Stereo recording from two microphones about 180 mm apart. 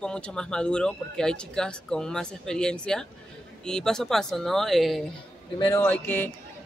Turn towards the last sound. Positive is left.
turn(degrees=10)  # may be behind; listen again after turning